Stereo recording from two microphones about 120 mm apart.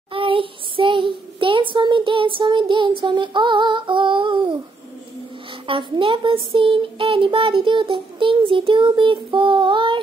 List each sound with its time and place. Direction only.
0.1 s child singing: 45° right (ahead or behind)
2.6 s female singing: 45° right (ahead or behind)
5.7 s speech: 45° right (ahead or behind)